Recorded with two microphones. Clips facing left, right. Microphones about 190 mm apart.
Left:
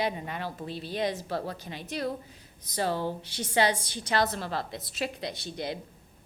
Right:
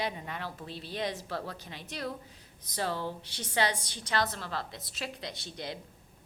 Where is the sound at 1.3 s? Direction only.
30° left (ahead or behind).